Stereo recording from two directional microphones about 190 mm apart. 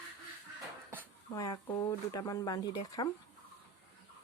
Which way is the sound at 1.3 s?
20° left (ahead or behind).